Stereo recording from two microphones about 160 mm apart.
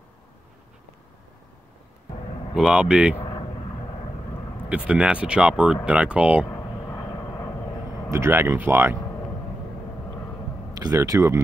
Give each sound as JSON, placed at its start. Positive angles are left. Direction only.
{"t": 2.5, "sound": "speech", "side_deg": -5}
{"t": 4.6, "sound": "speech", "side_deg": -5}
{"t": 6.5, "sound": "vehicle", "side_deg": 15}
{"t": 8.1, "sound": "speech", "side_deg": -15}
{"t": 10.8, "sound": "speech", "side_deg": -20}